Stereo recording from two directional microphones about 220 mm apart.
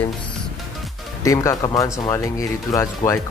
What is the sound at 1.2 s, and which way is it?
Speech, 15° left (ahead or behind).